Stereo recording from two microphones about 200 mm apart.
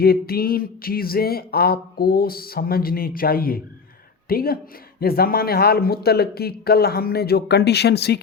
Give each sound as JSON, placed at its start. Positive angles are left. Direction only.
{"t": 0.0, "sound": "speech", "side_deg": 50}